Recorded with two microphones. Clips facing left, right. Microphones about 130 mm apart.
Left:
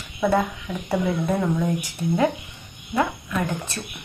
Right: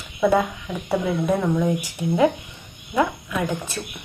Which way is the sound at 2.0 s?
15° right (ahead or behind).